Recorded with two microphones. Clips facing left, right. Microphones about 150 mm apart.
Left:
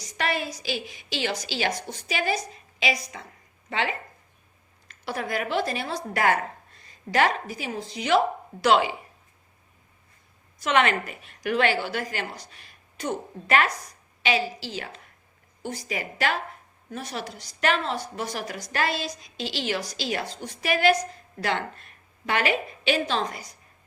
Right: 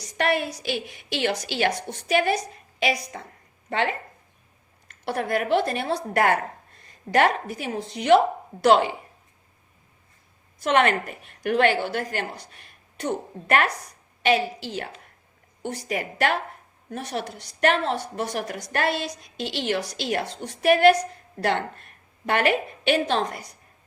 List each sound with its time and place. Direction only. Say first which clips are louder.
0.0 s a woman's voice: right 4 dB; 60° right (ahead or behind)
5.0 s a woman's voice: right 4 dB; 55° right (ahead or behind)
10.6 s a woman's voice: right 2 dB; 50° right (ahead or behind)
14.2 s a woman's voice: right 4 dB; 55° right (ahead or behind)